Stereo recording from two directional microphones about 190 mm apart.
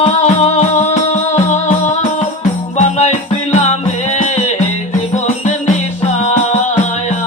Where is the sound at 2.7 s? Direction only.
35° left (ahead or behind).